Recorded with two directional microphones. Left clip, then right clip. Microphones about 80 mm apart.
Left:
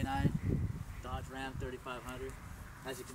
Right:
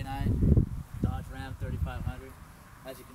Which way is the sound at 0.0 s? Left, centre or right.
Right.